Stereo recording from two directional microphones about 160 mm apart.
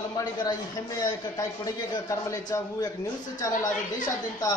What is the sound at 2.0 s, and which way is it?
A woman's voice, 20° left (ahead or behind).